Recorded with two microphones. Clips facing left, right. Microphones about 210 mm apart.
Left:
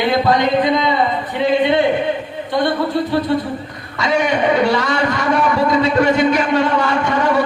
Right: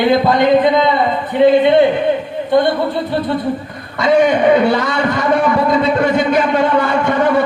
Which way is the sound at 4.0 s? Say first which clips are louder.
Right 5 dB; 55° right (ahead or behind).